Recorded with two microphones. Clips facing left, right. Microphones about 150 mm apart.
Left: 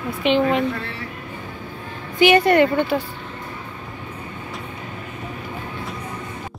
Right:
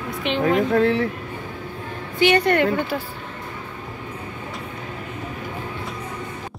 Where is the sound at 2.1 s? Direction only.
10° left (ahead or behind).